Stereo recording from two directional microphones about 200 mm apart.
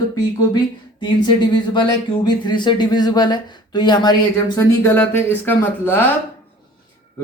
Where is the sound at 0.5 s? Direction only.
20° left (ahead or behind).